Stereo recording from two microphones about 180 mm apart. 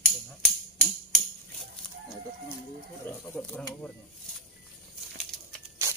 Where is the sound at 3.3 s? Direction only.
5° left (ahead or behind).